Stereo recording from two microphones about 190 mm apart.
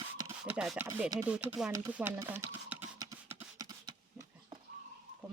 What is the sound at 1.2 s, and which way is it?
Speech, 5° right (ahead or behind).